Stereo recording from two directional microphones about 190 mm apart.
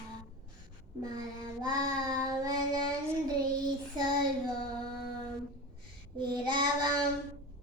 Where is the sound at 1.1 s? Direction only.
20° right (ahead or behind).